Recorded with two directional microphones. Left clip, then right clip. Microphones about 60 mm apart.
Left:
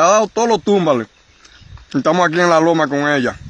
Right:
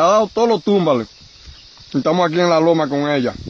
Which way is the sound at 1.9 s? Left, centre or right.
Right.